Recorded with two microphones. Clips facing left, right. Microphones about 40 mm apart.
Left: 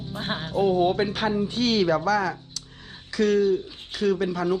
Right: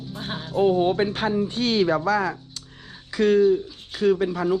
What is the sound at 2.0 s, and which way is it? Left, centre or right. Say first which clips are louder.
Speech: right 1 dB; right.